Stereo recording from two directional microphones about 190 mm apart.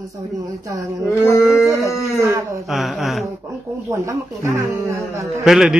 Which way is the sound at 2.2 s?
15° right (ahead or behind).